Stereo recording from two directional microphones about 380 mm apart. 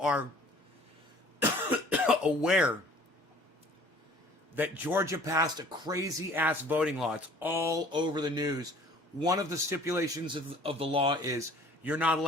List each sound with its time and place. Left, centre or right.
0.0 s speech: centre
1.9 s speech: centre
4.5 s speech: centre